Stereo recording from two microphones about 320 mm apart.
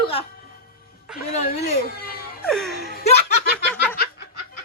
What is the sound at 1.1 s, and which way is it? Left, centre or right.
Speech, left.